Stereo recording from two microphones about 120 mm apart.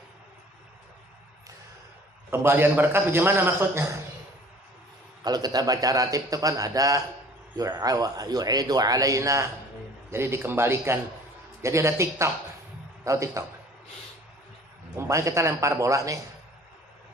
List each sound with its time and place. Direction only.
2.3 s a man's voice: 20° right (ahead or behind)
5.2 s a man's voice: 35° right (ahead or behind)
14.9 s a man's voice: 25° right (ahead or behind)